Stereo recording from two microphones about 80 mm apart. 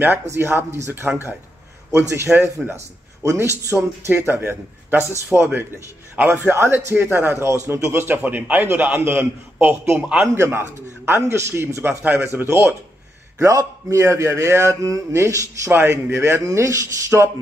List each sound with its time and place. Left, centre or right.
0.0 s a man's voice: right
10.2 s a man's voice: right
13.4 s a man's voice: right
15.7 s a man's voice: right